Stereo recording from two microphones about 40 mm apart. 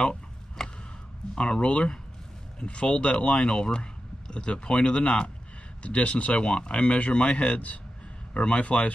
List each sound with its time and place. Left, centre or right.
0.0 s a sound: centre
1.3 s speech: left
6.4 s speech: left
8.3 s speech: left